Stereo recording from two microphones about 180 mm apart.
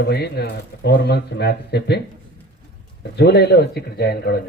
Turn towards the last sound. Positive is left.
turn(degrees=60)  # may be behind; listen again after turning